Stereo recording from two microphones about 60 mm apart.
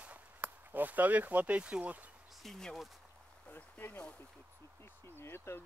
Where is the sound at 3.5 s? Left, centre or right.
Left.